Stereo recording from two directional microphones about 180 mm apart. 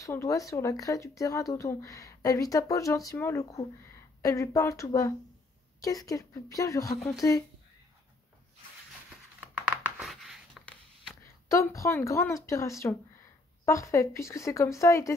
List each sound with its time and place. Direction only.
0.0 s speech: 15° left (ahead or behind)
9.4 s a sound: 5° right (ahead or behind)
11.4 s speech: 15° left (ahead or behind)